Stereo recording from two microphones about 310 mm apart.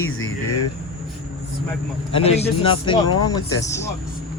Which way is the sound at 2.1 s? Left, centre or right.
Centre.